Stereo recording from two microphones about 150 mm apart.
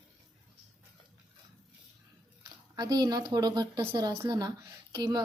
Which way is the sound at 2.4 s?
25° right (ahead or behind).